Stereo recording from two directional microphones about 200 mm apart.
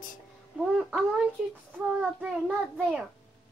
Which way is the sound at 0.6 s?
5° right (ahead or behind).